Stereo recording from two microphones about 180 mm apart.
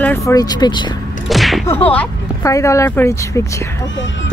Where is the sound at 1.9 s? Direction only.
10° left (ahead or behind).